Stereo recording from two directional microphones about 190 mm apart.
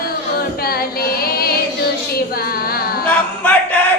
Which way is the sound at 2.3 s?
55° left (ahead or behind).